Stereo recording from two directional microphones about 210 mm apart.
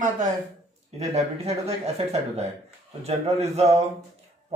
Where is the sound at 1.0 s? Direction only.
30° right (ahead or behind).